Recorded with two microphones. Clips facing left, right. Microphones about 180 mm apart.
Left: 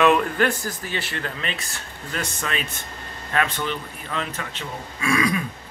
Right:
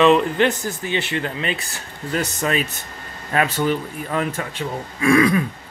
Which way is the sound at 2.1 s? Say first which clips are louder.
Right 7 dB; 40° right (ahead or behind).